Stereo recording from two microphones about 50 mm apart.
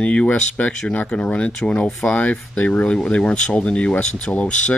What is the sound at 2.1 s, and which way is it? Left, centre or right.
Speech, left.